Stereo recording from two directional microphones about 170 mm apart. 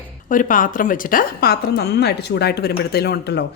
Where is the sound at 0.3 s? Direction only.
50° left (ahead or behind).